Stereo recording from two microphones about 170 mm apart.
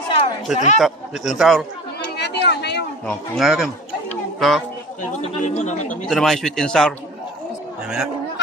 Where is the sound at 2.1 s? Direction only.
80° left.